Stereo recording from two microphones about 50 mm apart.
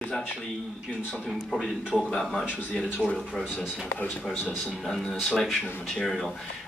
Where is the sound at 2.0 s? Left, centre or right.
Centre.